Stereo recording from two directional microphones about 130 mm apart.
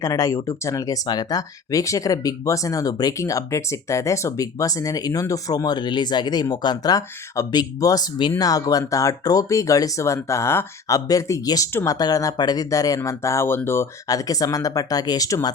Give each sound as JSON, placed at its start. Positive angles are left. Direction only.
{"t": 0.0, "sound": "speech", "side_deg": 25}
{"t": 11.9, "sound": "speech", "side_deg": 30}